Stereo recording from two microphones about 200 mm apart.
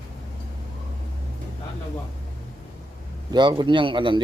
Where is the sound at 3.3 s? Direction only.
20° right (ahead or behind).